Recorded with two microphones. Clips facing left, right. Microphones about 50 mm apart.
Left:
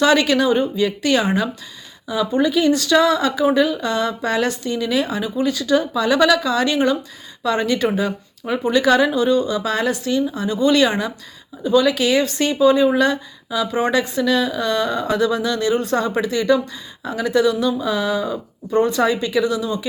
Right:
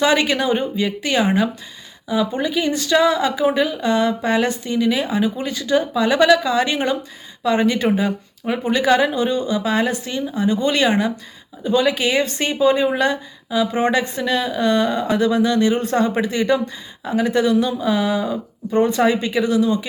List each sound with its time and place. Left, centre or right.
0.0 s speech: right